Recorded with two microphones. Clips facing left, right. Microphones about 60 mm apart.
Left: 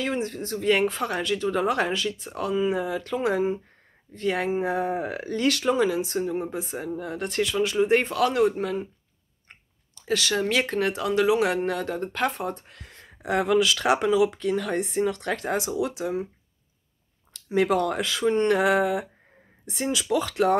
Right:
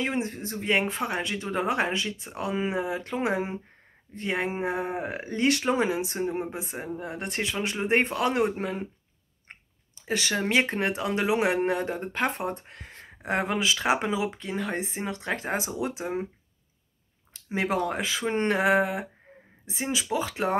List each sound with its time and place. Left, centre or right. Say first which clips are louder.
0.0 s speech: left 1 dB; right
9.5 s clicking: right 3 dB; right
10.4 s speech: left 1 dB; right
17.3 s speech: left 5 dB; right